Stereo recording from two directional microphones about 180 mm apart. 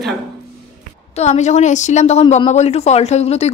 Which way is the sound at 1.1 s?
40° left (ahead or behind).